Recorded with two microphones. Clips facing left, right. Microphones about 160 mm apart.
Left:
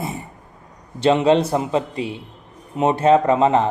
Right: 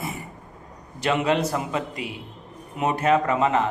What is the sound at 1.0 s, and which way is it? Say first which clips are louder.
A man's voice: left 7 dB; 30° left (ahead or behind).